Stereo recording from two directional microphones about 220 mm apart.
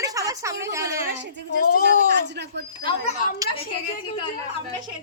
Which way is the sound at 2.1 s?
50° right (ahead or behind).